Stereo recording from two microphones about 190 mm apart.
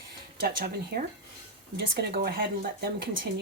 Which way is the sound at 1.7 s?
60° right (ahead or behind).